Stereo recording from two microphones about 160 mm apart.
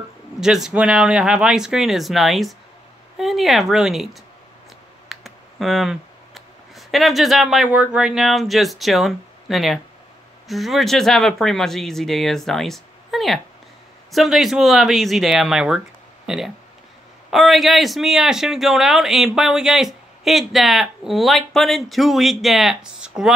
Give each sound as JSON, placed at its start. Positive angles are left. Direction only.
{"t": 0.4, "sound": "a man's voice", "side_deg": -5}